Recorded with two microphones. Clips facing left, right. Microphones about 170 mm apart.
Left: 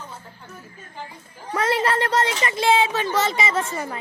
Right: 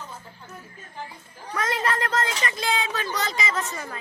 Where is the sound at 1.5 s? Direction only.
30° left (ahead or behind).